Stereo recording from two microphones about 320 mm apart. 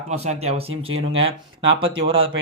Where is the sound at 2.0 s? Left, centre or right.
Right.